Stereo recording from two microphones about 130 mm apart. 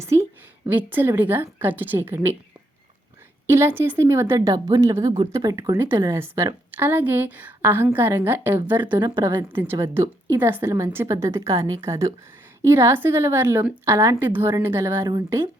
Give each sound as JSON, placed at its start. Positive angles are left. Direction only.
{"t": 0.0, "sound": "a woman's voice", "side_deg": -20}
{"t": 3.4, "sound": "a woman's voice", "side_deg": -20}